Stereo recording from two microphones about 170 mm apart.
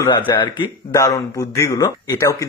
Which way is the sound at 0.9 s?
20° left (ahead or behind).